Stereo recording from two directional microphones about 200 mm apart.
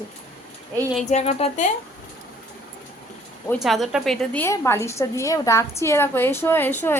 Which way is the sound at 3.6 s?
Centre (ahead or behind).